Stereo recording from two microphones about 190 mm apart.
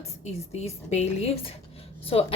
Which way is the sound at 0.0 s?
35° left (ahead or behind).